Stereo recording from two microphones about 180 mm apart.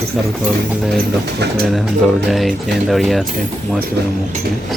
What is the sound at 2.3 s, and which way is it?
Speech, centre (ahead or behind).